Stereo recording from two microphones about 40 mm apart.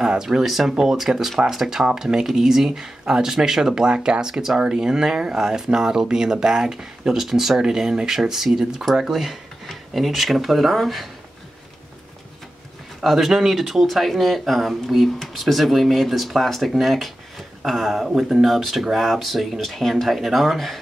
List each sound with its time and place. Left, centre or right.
0.2 s speech: centre
13.0 s speech: centre